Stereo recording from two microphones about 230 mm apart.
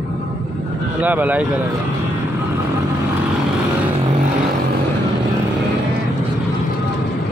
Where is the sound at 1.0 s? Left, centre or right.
Centre.